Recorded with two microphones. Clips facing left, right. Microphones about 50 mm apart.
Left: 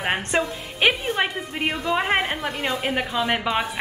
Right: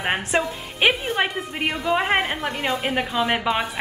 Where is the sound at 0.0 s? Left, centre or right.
Centre.